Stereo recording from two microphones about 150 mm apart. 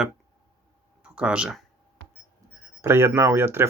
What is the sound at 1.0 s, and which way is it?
Speech, 5° right (ahead or behind).